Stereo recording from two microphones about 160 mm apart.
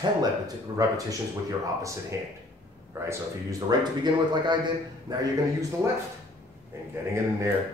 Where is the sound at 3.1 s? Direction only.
25° right (ahead or behind).